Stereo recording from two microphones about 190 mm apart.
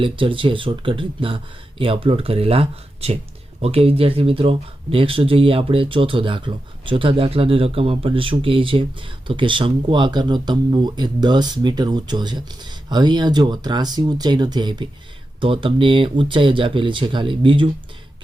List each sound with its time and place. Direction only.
0.0 s speech: 25° right (ahead or behind)